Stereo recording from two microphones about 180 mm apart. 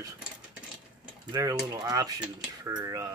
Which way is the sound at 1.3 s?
20° right (ahead or behind).